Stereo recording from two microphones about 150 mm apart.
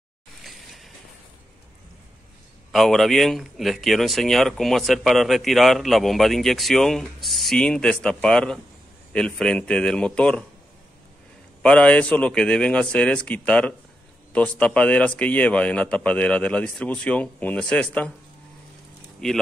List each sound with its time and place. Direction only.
0.4 s train: centre (ahead or behind)
2.7 s a man's voice: centre (ahead or behind)
11.6 s a man's voice: 5° left (ahead or behind)
19.2 s speech: 5° left (ahead or behind)